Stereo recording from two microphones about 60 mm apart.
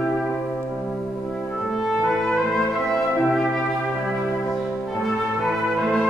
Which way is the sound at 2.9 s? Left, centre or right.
Centre.